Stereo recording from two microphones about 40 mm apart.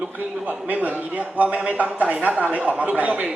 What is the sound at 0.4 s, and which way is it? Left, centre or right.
A man's voice, right.